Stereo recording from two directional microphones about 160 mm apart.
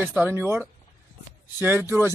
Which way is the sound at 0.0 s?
10° right (ahead or behind).